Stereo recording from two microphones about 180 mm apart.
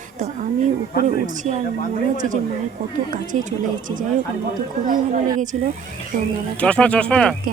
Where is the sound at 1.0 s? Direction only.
40° right (ahead or behind).